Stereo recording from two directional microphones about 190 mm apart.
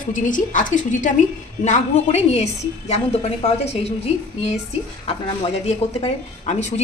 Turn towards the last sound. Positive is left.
turn(degrees=35)  # may be behind; listen again after turning